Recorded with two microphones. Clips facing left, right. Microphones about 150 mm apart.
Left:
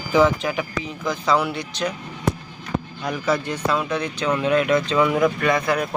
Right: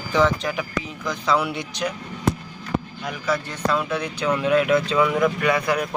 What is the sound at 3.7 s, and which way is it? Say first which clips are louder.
Speech: right 1 dB; 10° right (ahead or behind).